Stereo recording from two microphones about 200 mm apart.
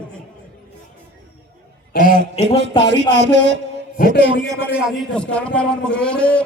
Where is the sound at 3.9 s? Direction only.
45° left (ahead or behind).